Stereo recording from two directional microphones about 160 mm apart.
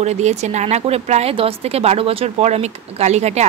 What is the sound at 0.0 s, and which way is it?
Speech, 45° right (ahead or behind).